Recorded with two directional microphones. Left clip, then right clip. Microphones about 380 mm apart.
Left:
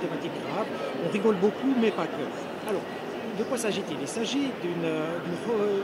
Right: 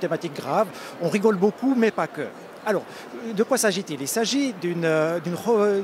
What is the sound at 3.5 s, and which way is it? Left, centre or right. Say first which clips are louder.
Speech: right 6 dB; right.